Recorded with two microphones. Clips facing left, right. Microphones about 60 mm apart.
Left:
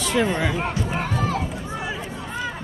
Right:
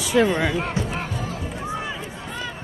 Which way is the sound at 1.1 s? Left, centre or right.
Left.